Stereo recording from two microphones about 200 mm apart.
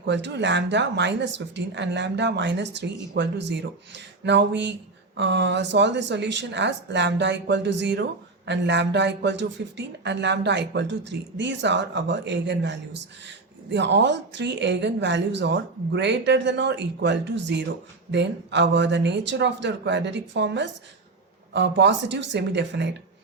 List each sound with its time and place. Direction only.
0.0 s speech: 60° right (ahead or behind)